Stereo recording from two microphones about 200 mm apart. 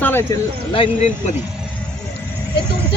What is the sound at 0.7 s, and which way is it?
Speech, 25° left (ahead or behind).